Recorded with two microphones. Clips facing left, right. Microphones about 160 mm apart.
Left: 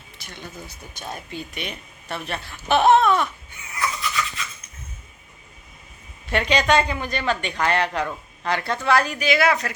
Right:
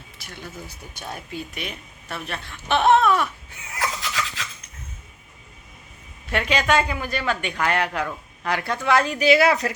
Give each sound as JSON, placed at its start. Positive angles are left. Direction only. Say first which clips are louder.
{"t": 0.2, "sound": "speech", "louder": "even", "side_deg": -5}
{"t": 3.7, "sound": "a sound", "louder": "left 1 dB", "side_deg": -90}
{"t": 6.2, "sound": "speech", "louder": "left 2 dB", "side_deg": -5}